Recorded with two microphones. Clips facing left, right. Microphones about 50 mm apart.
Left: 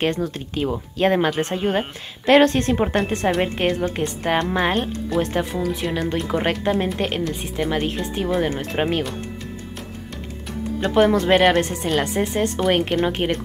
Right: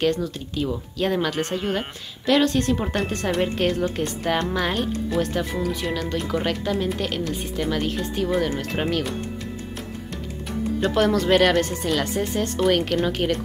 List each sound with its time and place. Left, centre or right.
0.0 s a woman's voice: left
7.2 s speech: left
10.8 s speech: centre